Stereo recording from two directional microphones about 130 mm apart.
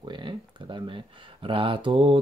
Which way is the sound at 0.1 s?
40° right (ahead or behind).